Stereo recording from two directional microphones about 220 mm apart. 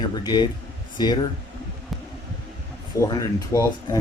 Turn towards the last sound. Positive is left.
turn(degrees=15)  # may be behind; listen again after turning